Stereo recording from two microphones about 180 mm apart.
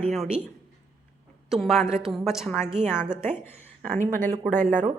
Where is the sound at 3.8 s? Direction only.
45° right (ahead or behind).